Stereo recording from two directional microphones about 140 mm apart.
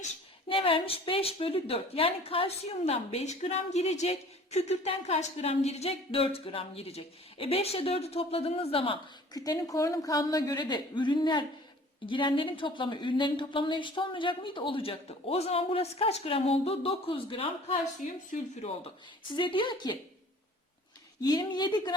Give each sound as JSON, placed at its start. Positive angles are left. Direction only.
{"t": 0.4, "sound": "a woman's voice", "side_deg": 40}
{"t": 9.3, "sound": "a woman's voice", "side_deg": 25}
{"t": 18.3, "sound": "a woman's voice", "side_deg": 50}
{"t": 19.4, "sound": "speech", "side_deg": 35}
{"t": 21.2, "sound": "a woman's voice", "side_deg": 30}